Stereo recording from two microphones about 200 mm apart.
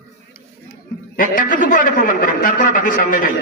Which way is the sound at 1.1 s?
40° left (ahead or behind).